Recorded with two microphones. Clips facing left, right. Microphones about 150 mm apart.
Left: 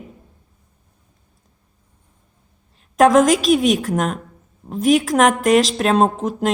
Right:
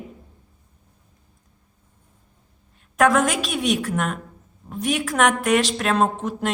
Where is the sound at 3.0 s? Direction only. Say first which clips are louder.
Left 6 dB; 35° left (ahead or behind).